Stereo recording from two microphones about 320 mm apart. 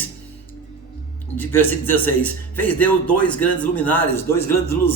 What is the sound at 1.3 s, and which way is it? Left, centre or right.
Speech, centre.